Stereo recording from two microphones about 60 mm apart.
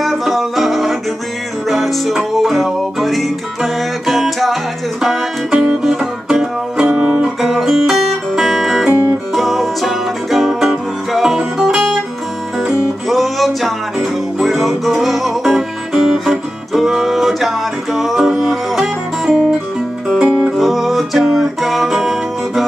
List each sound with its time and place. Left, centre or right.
0.0 s music: centre
6.9 s music: centre
7.4 s music: centre
13.1 s music: centre
20.5 s music: centre